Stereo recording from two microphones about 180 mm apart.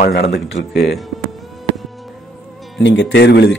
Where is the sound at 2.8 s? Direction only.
75° left (ahead or behind).